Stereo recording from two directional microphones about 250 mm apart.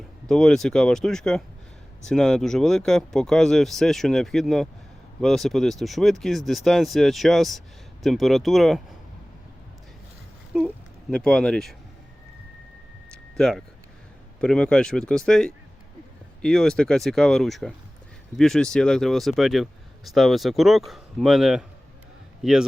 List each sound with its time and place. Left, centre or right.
0.3 s speech: centre
10.5 s speech: centre
13.1 s a sound: centre
14.4 s speech: centre